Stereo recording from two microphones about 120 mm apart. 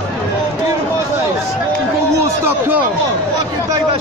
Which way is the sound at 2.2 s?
20° right (ahead or behind).